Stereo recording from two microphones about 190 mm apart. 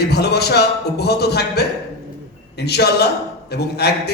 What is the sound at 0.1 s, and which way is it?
A man's voice, 60° left (ahead or behind).